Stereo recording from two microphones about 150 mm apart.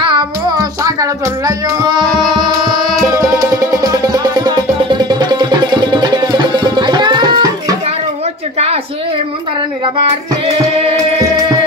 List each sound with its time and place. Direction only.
0.6 s music: 20° right (ahead or behind)